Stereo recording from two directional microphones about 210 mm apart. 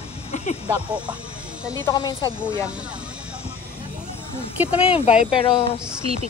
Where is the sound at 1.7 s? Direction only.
15° left (ahead or behind).